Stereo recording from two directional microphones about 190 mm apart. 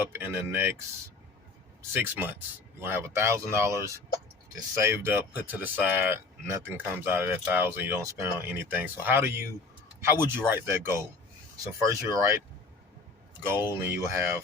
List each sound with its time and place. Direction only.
0.0 s speech: 10° right (ahead or behind)
1.9 s speech: 10° right (ahead or behind)
13.7 s speech: 15° right (ahead or behind)